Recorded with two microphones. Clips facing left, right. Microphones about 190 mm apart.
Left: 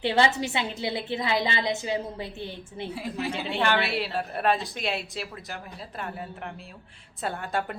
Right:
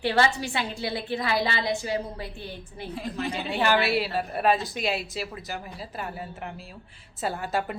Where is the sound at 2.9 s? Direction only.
10° left (ahead or behind).